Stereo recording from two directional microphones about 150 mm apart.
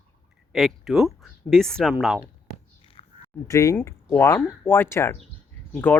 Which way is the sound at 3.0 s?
40° left (ahead or behind).